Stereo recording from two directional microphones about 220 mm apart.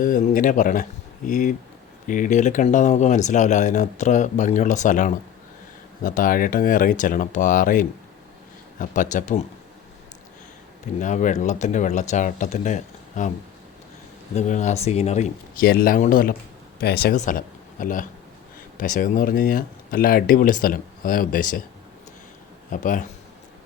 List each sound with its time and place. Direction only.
0.0 s speech: 40° left (ahead or behind)
11.0 s speech: 35° left (ahead or behind)
14.3 s speech: 35° left (ahead or behind)
22.7 s speech: 35° left (ahead or behind)